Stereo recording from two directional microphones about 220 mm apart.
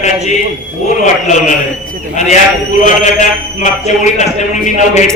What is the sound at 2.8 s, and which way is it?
A man's voice, 35° left (ahead or behind).